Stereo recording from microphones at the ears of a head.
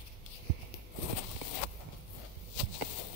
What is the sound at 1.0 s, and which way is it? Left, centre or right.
Walk, left.